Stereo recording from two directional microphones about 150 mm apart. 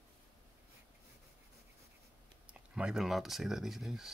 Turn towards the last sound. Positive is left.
turn(degrees=0)  # may be behind; listen again after turning